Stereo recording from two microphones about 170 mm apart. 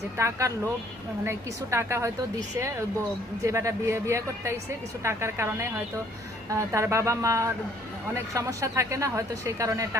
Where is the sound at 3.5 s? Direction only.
15° right (ahead or behind).